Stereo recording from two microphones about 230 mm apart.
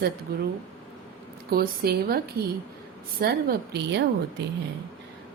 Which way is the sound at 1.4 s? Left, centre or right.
Right.